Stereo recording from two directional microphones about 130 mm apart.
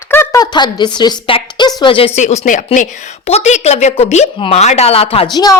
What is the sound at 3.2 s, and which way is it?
A woman's voice, 55° left (ahead or behind).